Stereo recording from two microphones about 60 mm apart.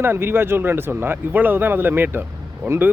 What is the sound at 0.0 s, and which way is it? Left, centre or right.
Speech, right.